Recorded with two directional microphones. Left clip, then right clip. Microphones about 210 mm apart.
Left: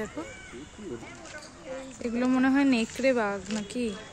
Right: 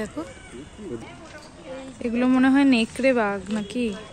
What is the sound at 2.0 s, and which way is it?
Speech, centre (ahead or behind).